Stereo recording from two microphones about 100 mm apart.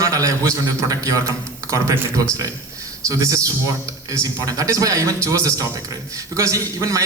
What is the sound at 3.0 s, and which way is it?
A man's voice, 35° right (ahead or behind).